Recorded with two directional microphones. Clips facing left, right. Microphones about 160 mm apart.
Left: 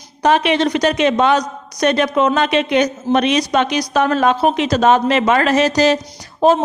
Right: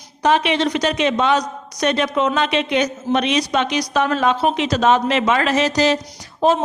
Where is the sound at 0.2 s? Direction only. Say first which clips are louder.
Left 3 dB; 50° left (ahead or behind).